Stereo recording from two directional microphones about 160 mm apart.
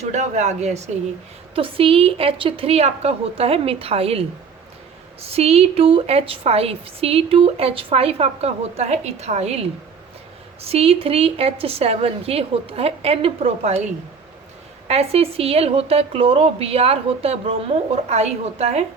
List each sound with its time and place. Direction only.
0.0 s a woman's voice: 45° right (ahead or behind)
14.8 s a woman's voice: 40° right (ahead or behind)